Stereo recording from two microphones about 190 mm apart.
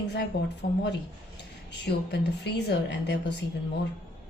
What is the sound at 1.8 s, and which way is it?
Speech, 60° left (ahead or behind).